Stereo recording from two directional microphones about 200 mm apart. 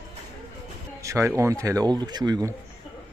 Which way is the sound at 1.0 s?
15° right (ahead or behind).